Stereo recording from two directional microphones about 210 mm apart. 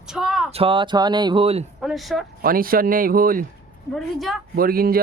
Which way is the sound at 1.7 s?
Centre (ahead or behind).